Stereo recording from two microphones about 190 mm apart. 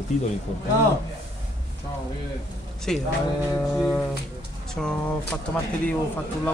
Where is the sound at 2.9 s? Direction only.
Centre (ahead or behind).